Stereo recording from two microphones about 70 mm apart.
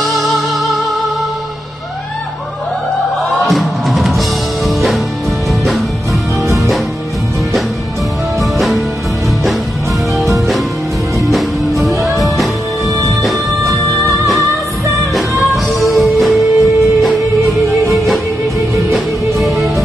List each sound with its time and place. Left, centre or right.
0.0 s music: centre
3.4 s music: centre
8.4 s music: centre
11.1 s music: centre
12.9 s music: right
15.1 s music: centre
19.3 s music: centre